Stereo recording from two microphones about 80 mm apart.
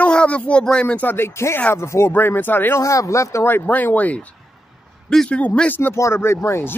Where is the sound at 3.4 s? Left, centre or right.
Left.